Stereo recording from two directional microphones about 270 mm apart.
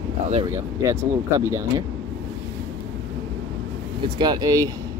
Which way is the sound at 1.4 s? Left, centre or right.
Centre.